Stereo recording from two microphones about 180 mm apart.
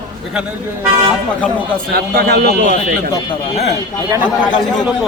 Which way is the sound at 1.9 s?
60° right (ahead or behind).